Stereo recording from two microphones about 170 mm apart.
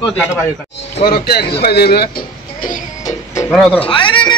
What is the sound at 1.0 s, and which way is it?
Speech, 65° left (ahead or behind).